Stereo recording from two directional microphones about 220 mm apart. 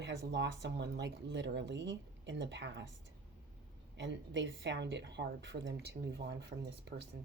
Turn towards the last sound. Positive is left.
turn(degrees=-50)  # may be behind; listen again after turning